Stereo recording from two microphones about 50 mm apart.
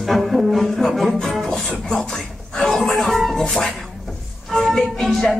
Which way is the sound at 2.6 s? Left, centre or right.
Centre.